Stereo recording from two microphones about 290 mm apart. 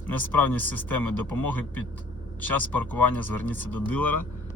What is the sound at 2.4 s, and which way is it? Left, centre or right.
Speech, centre.